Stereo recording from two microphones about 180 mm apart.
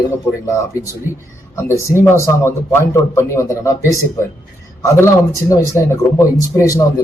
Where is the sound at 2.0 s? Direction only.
15° left (ahead or behind).